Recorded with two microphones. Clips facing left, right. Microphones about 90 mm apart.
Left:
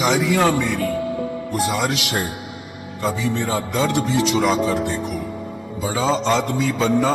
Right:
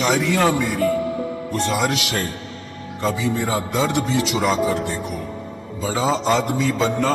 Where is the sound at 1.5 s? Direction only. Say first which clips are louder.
Even; 10° left (ahead or behind).